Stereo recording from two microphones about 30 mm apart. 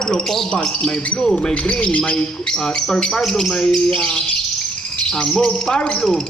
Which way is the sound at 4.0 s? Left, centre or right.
Left.